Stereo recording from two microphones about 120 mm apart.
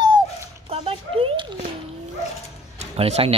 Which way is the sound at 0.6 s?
55° right (ahead or behind).